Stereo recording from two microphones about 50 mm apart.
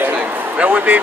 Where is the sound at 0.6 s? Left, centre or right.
Right.